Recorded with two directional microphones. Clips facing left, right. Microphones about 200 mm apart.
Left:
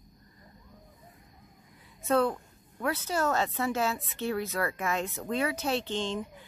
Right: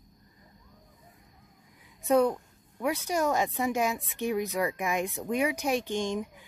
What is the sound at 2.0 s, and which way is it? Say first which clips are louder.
A woman's voice: right 3 dB; 15° right (ahead or behind).